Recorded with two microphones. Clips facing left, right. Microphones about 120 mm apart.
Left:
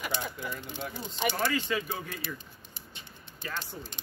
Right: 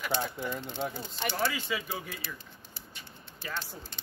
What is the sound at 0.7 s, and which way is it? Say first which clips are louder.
Speech: right 4 dB; 20° right (ahead or behind).